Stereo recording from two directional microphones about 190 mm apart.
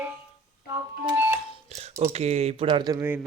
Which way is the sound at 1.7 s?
35° right (ahead or behind).